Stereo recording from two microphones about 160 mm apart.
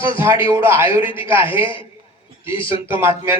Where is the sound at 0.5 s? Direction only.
15° right (ahead or behind).